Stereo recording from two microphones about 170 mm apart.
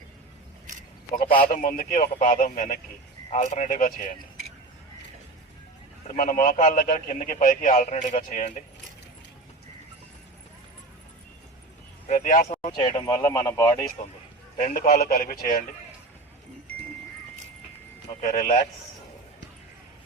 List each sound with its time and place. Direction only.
1.4 s a man's voice: 55° left (ahead or behind)
6.1 s a man's voice: 55° left (ahead or behind)
12.0 s speech: 45° left (ahead or behind)
12.9 s speech: 20° left (ahead or behind)
14.6 s a man's voice: 55° left (ahead or behind)
18.2 s speech: 50° left (ahead or behind)